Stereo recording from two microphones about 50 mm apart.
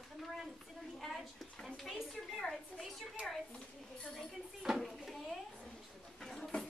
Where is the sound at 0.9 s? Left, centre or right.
Centre.